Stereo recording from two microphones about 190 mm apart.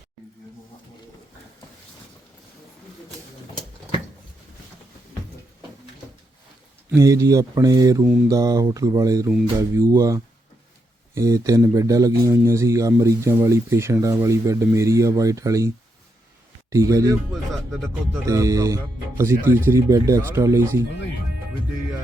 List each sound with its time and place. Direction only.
6.9 s a man's voice: 15° right (ahead or behind)
18.3 s a man's voice: 15° right (ahead or behind)